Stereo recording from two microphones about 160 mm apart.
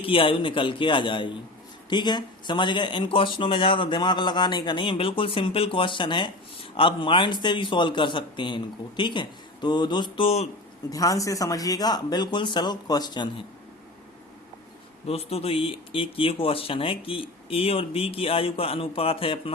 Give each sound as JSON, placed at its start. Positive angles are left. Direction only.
{"t": 0.0, "sound": "speech", "side_deg": 35}
{"t": 10.8, "sound": "speech", "side_deg": 20}
{"t": 15.0, "sound": "speech", "side_deg": 40}